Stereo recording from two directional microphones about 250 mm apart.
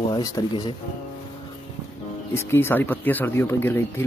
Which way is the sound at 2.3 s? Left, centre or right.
Centre.